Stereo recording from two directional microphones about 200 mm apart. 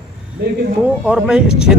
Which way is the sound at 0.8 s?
5° right (ahead or behind).